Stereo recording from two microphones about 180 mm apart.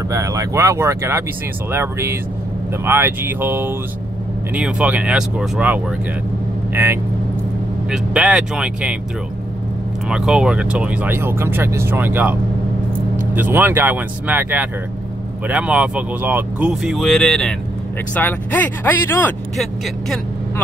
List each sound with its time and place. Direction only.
0.1 s speech: 15° right (ahead or behind)
10.0 s speech: 5° right (ahead or behind)